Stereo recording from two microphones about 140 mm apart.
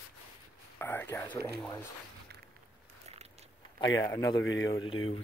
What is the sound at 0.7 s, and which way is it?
Speech, 15° left (ahead or behind).